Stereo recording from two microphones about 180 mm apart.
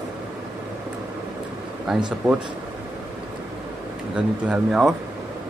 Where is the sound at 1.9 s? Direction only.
Centre (ahead or behind).